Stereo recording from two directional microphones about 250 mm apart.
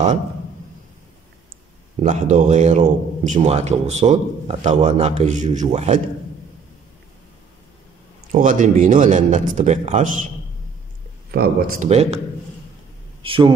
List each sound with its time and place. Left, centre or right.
2.0 s a man's voice: right
8.3 s a man's voice: right
11.3 s a man's voice: right
13.2 s speech: right